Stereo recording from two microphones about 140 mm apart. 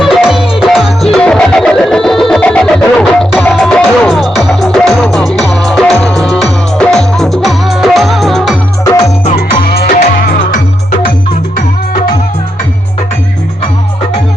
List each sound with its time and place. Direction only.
0.0 s music: centre (ahead or behind)
9.2 s music: 45° left (ahead or behind)
9.7 s music: 90° left